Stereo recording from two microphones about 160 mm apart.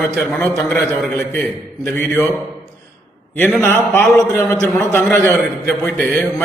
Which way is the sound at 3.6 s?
15° left (ahead or behind).